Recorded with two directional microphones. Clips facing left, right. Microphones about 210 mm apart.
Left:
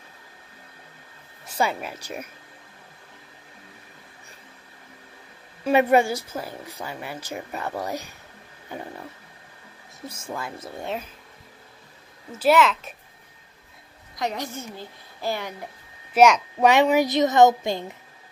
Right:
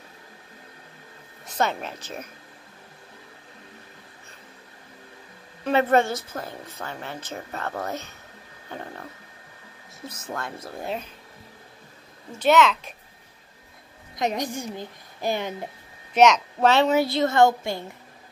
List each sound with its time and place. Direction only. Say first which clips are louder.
1.6 s a woman's voice: even; 10° left (ahead or behind)
5.6 s a woman's voice: left 2 dB; 10° left (ahead or behind)
10.2 s a woman's voice: even; 5° left (ahead or behind)
12.3 s a woman's voice: even; 5° left (ahead or behind)
14.1 s a woman's voice: right 3 dB; 20° right (ahead or behind)
16.1 s a woman's voice: left 1 dB; 10° left (ahead or behind)